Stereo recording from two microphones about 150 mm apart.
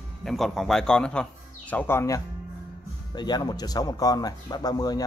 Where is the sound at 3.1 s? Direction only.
30° left (ahead or behind).